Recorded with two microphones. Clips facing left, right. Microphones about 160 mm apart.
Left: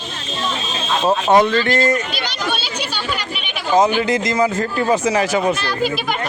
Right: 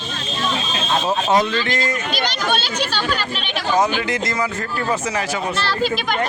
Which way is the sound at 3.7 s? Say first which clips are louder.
Left 4 dB; 25° left (ahead or behind).